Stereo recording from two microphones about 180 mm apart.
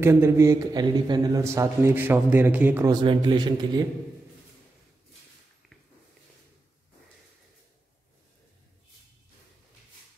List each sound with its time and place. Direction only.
0.0 s a man's voice: 15° right (ahead or behind)
2.9 s a man's voice: 25° right (ahead or behind)